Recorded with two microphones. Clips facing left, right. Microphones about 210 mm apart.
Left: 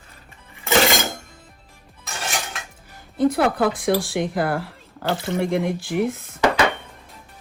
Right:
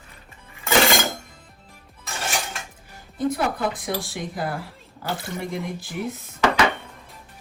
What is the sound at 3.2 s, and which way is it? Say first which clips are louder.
Speech: left 5 dB; 75° left (ahead or behind).